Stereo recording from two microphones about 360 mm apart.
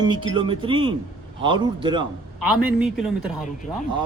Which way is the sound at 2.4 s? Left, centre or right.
Left.